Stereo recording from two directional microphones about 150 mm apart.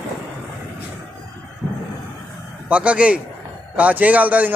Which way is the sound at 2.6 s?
10° right (ahead or behind).